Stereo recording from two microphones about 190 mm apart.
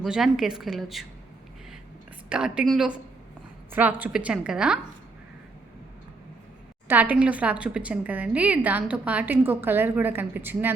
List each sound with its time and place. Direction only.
0.0 s a woman's voice: centre (ahead or behind)
2.3 s a woman's voice: 5° right (ahead or behind)
6.8 s a woman's voice: 10° right (ahead or behind)